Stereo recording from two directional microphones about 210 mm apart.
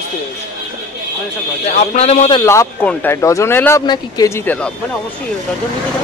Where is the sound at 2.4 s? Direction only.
15° left (ahead or behind).